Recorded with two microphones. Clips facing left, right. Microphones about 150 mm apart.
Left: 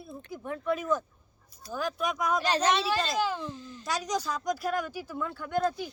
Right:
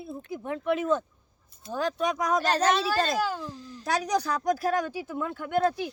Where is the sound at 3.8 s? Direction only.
60° right (ahead or behind).